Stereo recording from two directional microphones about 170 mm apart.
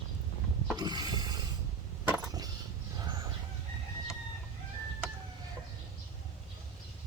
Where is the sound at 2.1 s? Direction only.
20° right (ahead or behind).